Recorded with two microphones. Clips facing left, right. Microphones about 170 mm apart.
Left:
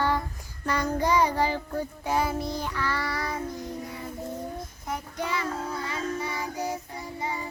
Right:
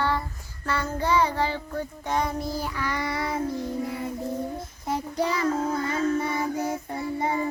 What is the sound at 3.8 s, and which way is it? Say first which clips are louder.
Music: right 7 dB; 25° right (ahead or behind).